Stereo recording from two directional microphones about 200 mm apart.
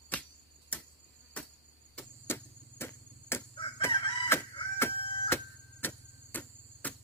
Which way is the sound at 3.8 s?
20° left (ahead or behind).